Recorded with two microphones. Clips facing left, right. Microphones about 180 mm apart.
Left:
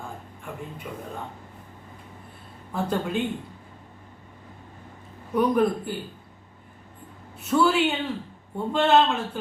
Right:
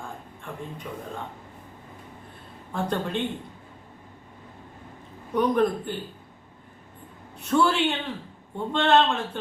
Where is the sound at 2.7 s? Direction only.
5° left (ahead or behind).